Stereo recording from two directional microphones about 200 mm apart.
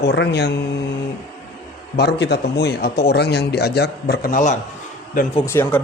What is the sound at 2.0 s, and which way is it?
A man's voice, 55° left (ahead or behind).